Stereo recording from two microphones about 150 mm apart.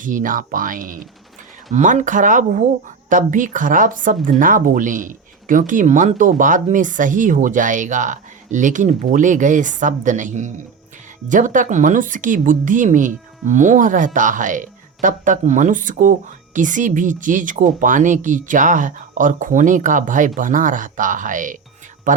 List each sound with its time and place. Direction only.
0.0 s speech: 60° right (ahead or behind)
1.7 s speech: 55° right (ahead or behind)